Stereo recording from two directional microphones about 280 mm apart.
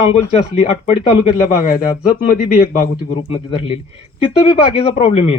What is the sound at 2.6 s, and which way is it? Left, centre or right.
Speech, centre.